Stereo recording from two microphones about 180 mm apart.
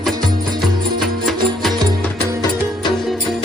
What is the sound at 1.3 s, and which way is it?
Music, centre (ahead or behind).